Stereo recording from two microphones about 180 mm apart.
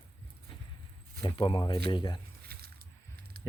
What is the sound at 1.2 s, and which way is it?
Speech, 30° left (ahead or behind).